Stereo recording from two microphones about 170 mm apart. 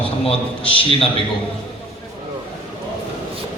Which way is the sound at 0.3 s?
35° left (ahead or behind).